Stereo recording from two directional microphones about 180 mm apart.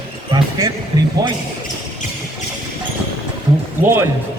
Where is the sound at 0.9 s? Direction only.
20° right (ahead or behind).